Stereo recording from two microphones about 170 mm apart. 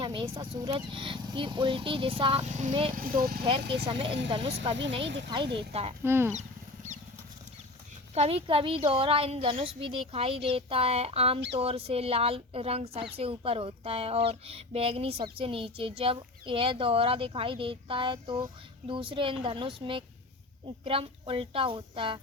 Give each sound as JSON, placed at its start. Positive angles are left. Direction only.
{"t": 0.0, "sound": "speech", "side_deg": -25}
{"t": 2.9, "sound": "speech", "side_deg": -60}
{"t": 3.7, "sound": "speech", "side_deg": -30}
{"t": 5.0, "sound": "speech", "side_deg": -90}
{"t": 5.5, "sound": "speech", "side_deg": -35}
{"t": 6.0, "sound": "speech", "side_deg": -15}
{"t": 8.1, "sound": "speech", "side_deg": -35}